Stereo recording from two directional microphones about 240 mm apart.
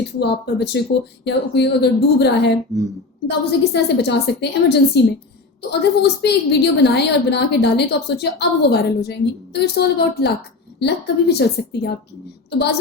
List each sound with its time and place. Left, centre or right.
0.2 s a woman's voice: left
2.7 s speech: centre
3.2 s a woman's voice: left